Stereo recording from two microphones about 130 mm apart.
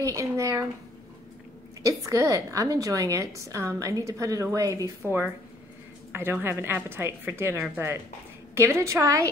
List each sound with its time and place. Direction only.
0.0 s a woman's voice: 25° right (ahead or behind)
1.9 s a woman's voice: 25° right (ahead or behind)
6.1 s a woman's voice: 15° right (ahead or behind)